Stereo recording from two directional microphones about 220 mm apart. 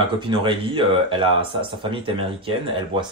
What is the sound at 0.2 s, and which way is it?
Speech, 20° right (ahead or behind).